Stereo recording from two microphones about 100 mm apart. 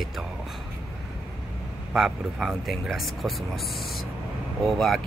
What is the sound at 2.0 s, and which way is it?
Speech, 5° right (ahead or behind).